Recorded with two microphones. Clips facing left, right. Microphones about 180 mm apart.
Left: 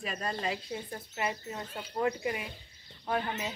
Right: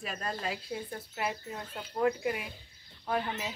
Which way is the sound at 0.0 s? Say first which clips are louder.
Left 2 dB; centre (ahead or behind).